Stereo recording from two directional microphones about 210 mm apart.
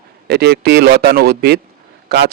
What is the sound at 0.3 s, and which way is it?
Speech, 50° right (ahead or behind).